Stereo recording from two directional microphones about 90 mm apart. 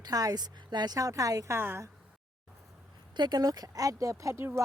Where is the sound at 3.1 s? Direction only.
55° right (ahead or behind); by 4.6 s 30° right (ahead or behind).